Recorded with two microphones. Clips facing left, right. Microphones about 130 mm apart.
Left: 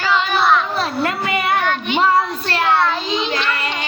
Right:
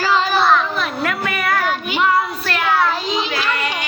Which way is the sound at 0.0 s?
35° right (ahead or behind).